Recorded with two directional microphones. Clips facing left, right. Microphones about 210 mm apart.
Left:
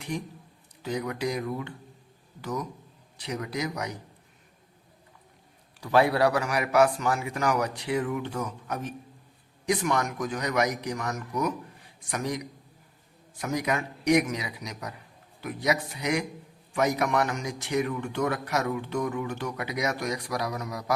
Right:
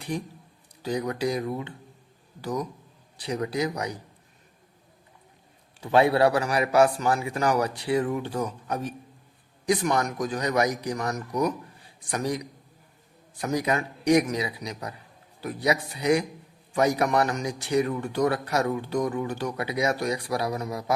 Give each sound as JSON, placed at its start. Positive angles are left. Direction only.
{"t": 0.8, "sound": "a man's voice", "side_deg": -35}
{"t": 5.8, "sound": "a man's voice", "side_deg": -25}
{"t": 13.4, "sound": "a man's voice", "side_deg": -35}